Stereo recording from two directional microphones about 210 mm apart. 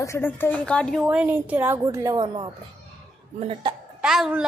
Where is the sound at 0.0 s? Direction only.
10° left (ahead or behind); by 3.8 s 25° right (ahead or behind).